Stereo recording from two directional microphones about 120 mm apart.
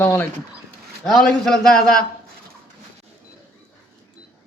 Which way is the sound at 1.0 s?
5° left (ahead or behind).